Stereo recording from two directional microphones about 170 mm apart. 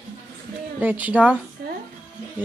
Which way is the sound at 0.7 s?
10° right (ahead or behind).